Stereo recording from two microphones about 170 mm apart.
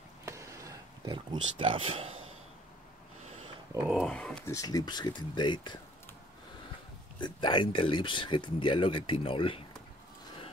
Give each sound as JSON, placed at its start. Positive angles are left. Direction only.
{"t": 0.2, "sound": "a sound", "side_deg": -15}
{"t": 3.8, "sound": "speech", "side_deg": 0}
{"t": 4.5, "sound": "speech", "side_deg": 20}
{"t": 7.2, "sound": "speech", "side_deg": 25}